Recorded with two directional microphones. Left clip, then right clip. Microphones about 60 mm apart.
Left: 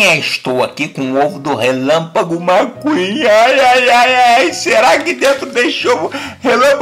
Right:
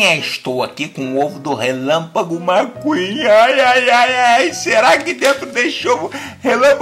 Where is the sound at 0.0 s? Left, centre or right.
Centre.